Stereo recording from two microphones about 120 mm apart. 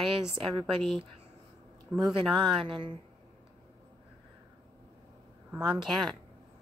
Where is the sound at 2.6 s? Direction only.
45° right (ahead or behind).